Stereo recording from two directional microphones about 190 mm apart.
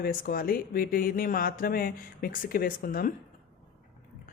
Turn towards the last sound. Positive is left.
turn(degrees=50)  # may be behind; listen again after turning